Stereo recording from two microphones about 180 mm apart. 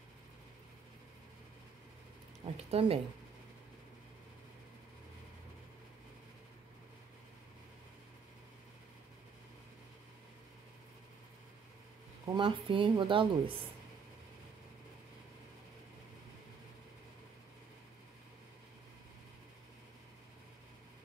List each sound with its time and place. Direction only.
2.5 s speech: 35° right (ahead or behind)
12.3 s speech: 25° right (ahead or behind)